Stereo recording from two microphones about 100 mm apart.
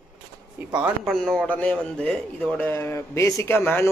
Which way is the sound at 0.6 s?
15° right (ahead or behind).